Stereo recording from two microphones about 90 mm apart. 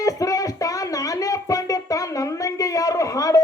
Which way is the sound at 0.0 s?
40° left (ahead or behind).